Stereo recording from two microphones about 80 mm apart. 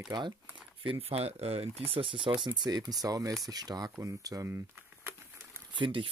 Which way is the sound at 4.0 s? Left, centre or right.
Right.